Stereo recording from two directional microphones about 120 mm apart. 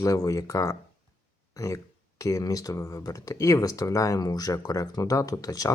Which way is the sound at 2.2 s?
30° left (ahead or behind).